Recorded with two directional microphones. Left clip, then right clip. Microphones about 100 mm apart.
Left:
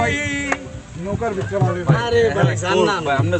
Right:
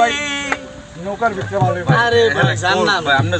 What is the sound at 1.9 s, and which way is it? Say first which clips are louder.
Speech: right 4 dB; 20° left (ahead or behind).